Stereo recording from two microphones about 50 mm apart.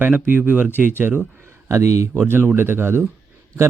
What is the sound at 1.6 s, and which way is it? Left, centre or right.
Speech, right.